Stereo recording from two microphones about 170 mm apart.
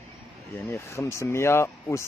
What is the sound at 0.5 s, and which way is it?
A man's voice, 15° left (ahead or behind).